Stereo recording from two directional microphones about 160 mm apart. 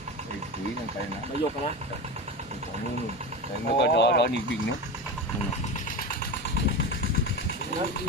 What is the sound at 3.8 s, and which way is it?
Speech, 90° left.